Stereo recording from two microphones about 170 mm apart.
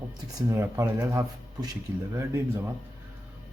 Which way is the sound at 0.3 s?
15° right (ahead or behind).